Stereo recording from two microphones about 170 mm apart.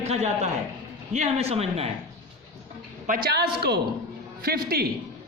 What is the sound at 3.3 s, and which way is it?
Speech, 75° right (ahead or behind).